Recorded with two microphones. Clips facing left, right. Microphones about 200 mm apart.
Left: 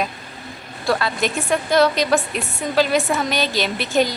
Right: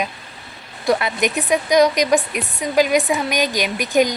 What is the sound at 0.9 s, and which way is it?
A woman's voice, 20° right (ahead or behind).